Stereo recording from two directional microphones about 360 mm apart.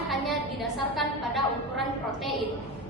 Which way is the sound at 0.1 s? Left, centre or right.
Centre.